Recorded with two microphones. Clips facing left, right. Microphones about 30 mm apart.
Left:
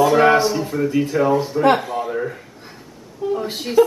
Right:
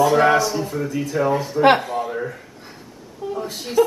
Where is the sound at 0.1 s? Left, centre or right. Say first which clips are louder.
Left 2 dB; centre.